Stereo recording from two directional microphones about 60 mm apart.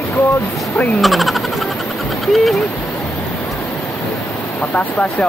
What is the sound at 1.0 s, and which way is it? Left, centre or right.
Speech, centre.